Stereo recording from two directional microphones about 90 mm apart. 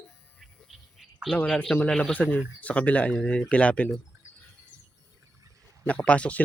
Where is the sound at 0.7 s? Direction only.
Centre (ahead or behind).